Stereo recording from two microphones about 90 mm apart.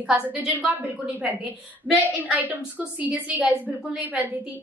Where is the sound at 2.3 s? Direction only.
20° right (ahead or behind).